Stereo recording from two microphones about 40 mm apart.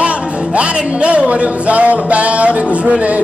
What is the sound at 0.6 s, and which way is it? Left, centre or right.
Music, right.